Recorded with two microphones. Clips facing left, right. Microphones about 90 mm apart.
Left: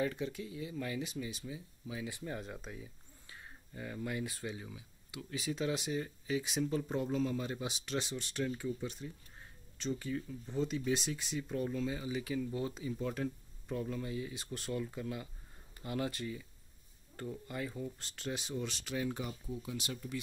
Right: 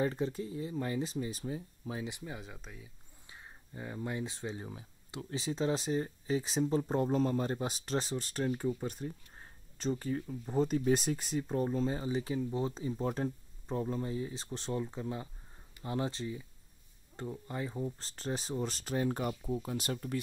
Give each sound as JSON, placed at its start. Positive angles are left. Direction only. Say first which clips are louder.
{"t": 0.0, "sound": "speech", "louder": "right 3 dB", "side_deg": -35}
{"t": 2.0, "sound": "speech", "louder": "even", "side_deg": -20}
{"t": 2.3, "sound": "speech", "louder": "left 3 dB", "side_deg": 0}
{"t": 3.3, "sound": "speech", "louder": "right 1 dB", "side_deg": -20}
{"t": 4.6, "sound": "speech", "louder": "right 4 dB", "side_deg": -40}